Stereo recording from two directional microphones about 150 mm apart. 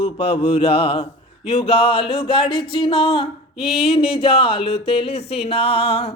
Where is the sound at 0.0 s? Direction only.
40° left (ahead or behind).